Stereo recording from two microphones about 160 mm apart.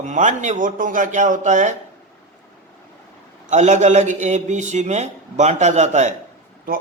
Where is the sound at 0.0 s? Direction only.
50° right (ahead or behind).